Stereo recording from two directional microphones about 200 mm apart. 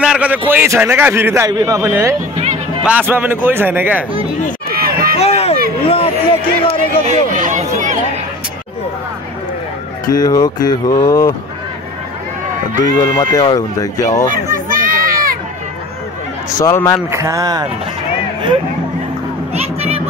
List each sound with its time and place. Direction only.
0.0 s a sound: 5° right (ahead or behind)
0.5 s a man's voice: 10° right (ahead or behind)
2.3 s music: 35° right (ahead or behind)
2.8 s a man's voice: 5° right (ahead or behind)
4.7 s run: 50° right (ahead or behind)
5.2 s a sound: 30° left (ahead or behind)
7.1 s a sound: 40° right (ahead or behind)
10.0 s speech: 20° left (ahead or behind)
13.1 s speech: 20° left (ahead or behind)
14.3 s a sound: 45° right (ahead or behind)
16.5 s speech: 15° left (ahead or behind)
17.1 s a man's voice: 15° right (ahead or behind)
19.5 s music: 30° right (ahead or behind)